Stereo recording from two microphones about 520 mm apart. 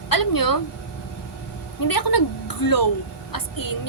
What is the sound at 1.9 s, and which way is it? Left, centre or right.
A woman's voice, left.